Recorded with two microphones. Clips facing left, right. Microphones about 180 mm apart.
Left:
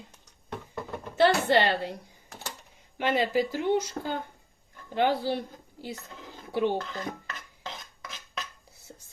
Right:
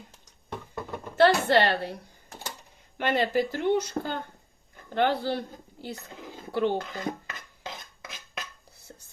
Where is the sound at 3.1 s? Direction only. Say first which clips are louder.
Even; 55° right (ahead or behind).